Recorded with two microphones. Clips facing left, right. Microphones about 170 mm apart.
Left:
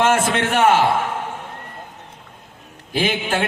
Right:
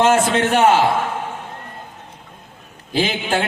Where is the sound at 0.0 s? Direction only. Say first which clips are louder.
Right 2 dB; 25° right (ahead or behind).